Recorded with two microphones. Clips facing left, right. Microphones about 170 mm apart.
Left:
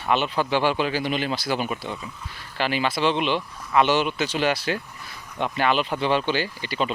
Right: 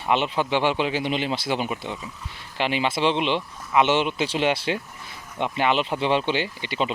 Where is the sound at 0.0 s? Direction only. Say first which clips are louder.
Even; 20° right (ahead or behind).